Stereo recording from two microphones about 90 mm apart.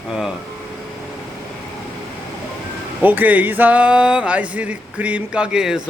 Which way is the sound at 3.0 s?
20° right (ahead or behind).